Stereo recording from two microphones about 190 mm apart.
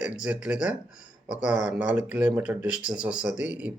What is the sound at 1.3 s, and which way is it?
Speech, 40° left (ahead or behind).